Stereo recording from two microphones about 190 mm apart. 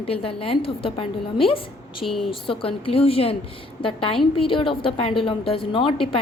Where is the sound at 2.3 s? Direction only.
30° left (ahead or behind).